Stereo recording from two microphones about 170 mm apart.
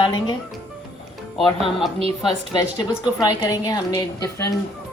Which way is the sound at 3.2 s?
20° left (ahead or behind).